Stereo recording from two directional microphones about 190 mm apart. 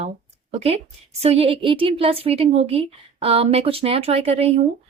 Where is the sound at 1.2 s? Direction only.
30° right (ahead or behind).